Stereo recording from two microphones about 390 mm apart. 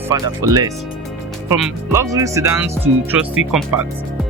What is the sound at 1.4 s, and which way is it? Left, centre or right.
Speech, centre.